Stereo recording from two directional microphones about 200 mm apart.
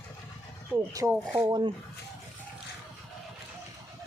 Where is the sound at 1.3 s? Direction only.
20° right (ahead or behind).